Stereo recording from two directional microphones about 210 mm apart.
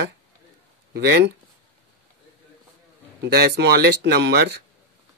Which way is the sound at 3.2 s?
55° right (ahead or behind).